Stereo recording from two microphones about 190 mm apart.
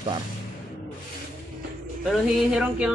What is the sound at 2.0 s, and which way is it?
Speech, 5° right (ahead or behind).